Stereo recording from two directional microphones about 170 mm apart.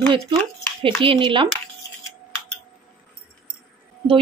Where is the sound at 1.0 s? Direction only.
30° right (ahead or behind).